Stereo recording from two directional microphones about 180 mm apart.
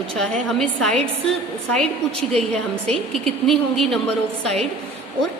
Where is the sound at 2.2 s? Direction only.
35° right (ahead or behind).